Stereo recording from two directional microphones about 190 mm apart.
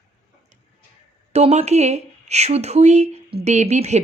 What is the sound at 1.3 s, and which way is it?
Speech, 35° right (ahead or behind).